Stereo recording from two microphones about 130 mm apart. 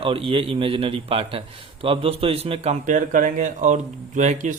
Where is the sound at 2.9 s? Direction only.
80° right.